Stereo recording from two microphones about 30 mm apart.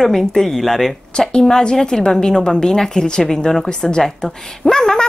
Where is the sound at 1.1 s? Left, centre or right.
Left.